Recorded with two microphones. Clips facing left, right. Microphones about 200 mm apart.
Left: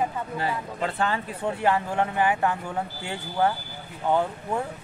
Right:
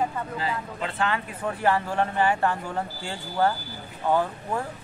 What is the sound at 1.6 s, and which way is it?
Speech, 20° left (ahead or behind).